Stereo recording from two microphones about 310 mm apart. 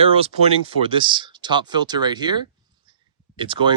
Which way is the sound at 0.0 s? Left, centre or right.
Centre.